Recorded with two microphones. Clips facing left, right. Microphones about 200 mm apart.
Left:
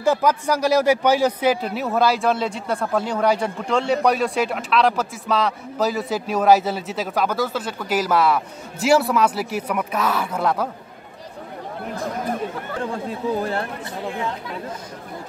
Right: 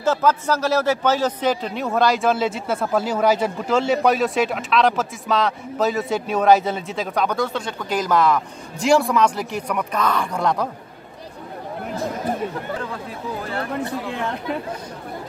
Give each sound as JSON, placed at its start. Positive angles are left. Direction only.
{"t": 0.0, "sound": "a man's voice", "side_deg": 15}
{"t": 14.1, "sound": "speech", "side_deg": -65}